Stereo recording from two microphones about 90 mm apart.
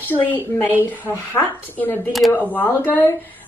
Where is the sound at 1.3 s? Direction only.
20° left (ahead or behind).